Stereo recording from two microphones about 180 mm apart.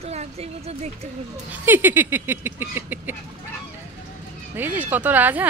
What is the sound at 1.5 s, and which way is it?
Speech, 10° right (ahead or behind).